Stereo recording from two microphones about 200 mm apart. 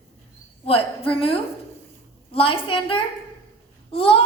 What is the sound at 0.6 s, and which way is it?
A woman's voice, 30° left (ahead or behind).